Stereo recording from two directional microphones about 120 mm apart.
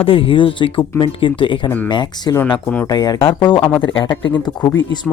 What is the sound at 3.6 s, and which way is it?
Speech, 15° left (ahead or behind).